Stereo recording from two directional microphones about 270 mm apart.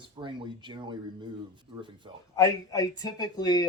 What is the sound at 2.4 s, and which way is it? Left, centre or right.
Speech, centre.